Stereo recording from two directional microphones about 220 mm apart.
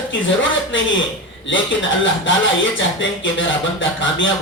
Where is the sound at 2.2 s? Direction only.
60° left (ahead or behind).